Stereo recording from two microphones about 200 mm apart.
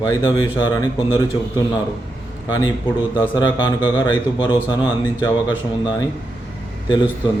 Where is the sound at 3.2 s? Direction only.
20° left (ahead or behind).